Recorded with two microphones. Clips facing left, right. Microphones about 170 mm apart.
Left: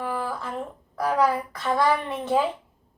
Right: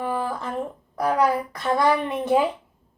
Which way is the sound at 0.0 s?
20° right (ahead or behind).